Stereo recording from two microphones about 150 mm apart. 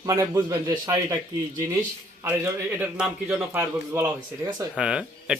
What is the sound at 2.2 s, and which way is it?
A man's voice, 10° right (ahead or behind).